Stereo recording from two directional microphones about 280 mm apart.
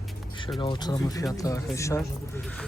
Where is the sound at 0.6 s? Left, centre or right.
Centre.